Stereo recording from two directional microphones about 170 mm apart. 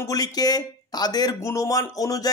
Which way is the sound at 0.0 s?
20° left (ahead or behind).